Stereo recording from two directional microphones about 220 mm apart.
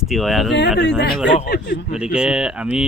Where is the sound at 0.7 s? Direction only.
50° left (ahead or behind).